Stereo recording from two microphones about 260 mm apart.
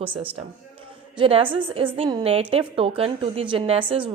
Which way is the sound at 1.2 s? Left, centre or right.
Centre.